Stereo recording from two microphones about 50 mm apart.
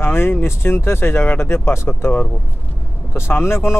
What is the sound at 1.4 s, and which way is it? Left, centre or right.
Speech, left.